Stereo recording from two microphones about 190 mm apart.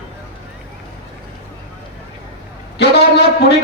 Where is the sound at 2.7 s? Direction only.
60° left (ahead or behind).